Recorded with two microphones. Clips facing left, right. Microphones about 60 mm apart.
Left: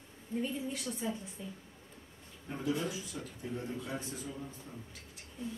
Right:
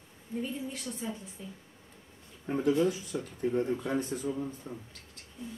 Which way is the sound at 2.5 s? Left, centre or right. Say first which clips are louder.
Right 8 dB; right.